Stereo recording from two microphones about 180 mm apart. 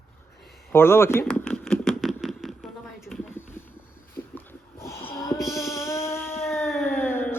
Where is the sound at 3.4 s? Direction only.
10° left (ahead or behind).